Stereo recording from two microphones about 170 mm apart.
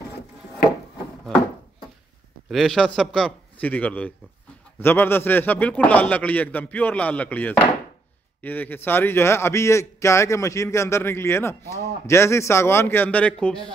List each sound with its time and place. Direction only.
2.5 s a man's voice: centre (ahead or behind)